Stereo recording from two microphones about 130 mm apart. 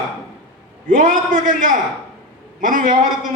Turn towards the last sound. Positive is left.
turn(degrees=-90)